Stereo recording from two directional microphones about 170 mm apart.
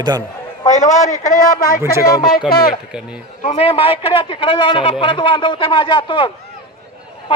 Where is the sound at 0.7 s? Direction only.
45° left (ahead or behind).